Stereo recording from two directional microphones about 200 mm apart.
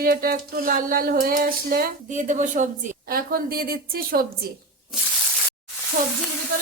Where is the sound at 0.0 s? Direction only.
45° right (ahead or behind).